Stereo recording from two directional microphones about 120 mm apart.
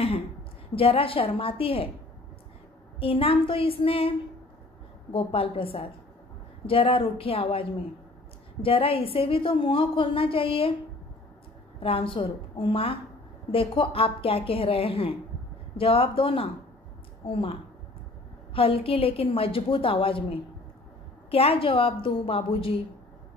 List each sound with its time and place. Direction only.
0.0 s a woman's voice: 50° left (ahead or behind)
3.0 s a woman's voice: 50° left (ahead or behind)
5.1 s a woman's voice: 50° left (ahead or behind)
8.6 s a woman's voice: 50° left (ahead or behind)
11.8 s a woman's voice: 45° left (ahead or behind)